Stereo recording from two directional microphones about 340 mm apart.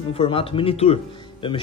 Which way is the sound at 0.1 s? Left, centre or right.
Centre.